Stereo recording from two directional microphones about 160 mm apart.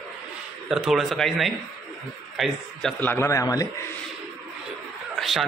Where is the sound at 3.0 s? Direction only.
15° left (ahead or behind).